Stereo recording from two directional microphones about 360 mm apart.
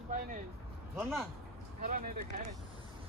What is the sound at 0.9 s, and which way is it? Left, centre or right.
Speech, centre.